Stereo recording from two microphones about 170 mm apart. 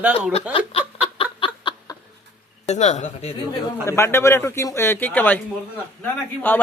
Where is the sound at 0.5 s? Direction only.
35° left (ahead or behind).